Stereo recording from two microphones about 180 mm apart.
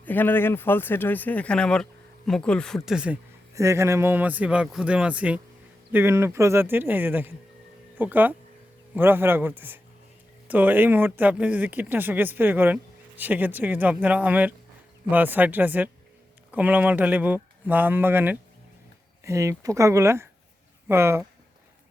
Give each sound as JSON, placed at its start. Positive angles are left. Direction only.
{"t": 0.0, "sound": "speech", "side_deg": 10}
{"t": 3.5, "sound": "speech", "side_deg": -15}